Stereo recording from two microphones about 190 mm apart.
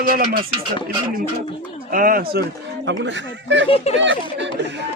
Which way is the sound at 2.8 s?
70° right (ahead or behind).